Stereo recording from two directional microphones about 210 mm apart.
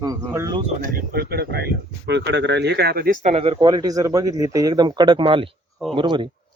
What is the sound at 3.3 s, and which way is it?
Speech, 25° right (ahead or behind).